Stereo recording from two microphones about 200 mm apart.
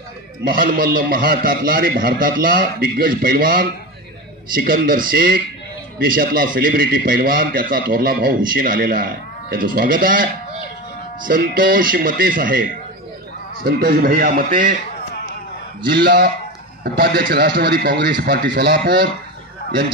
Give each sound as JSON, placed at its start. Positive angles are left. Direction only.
{"t": 0.4, "sound": "a man's voice", "side_deg": -45}
{"t": 13.7, "sound": "a man's voice", "side_deg": -50}
{"t": 15.9, "sound": "a man's voice", "side_deg": -55}